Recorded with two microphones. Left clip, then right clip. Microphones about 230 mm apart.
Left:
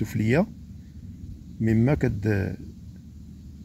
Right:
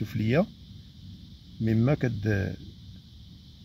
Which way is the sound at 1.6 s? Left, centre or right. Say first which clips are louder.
Left 3 dB; centre.